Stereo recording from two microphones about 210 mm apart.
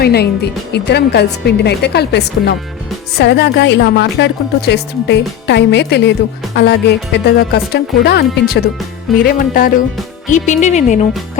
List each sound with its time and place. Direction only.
0.0 s speech: 50° left (ahead or behind); by 11.0 s 35° left (ahead or behind)